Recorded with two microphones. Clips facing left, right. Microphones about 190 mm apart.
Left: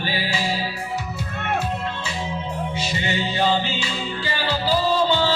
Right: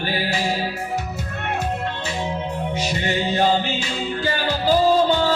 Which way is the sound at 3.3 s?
45° right (ahead or behind).